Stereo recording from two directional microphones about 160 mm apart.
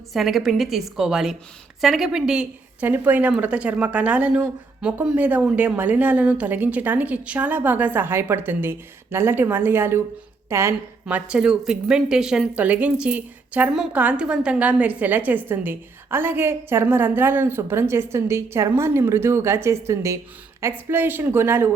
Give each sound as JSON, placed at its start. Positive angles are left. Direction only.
{"t": 0.1, "sound": "a woman's voice", "side_deg": 0}
{"t": 11.0, "sound": "speech", "side_deg": -5}